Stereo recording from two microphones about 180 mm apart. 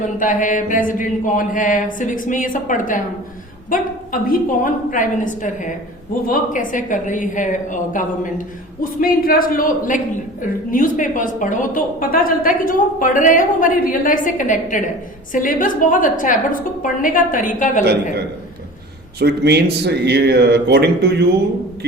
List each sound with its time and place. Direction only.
0.0 s a woman's voice: 45° left (ahead or behind)
19.2 s speech: 65° right (ahead or behind)